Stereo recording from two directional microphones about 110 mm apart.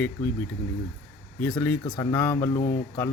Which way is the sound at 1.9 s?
20° left (ahead or behind).